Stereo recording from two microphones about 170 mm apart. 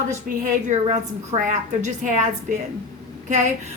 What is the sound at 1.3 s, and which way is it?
Speech, 45° right (ahead or behind).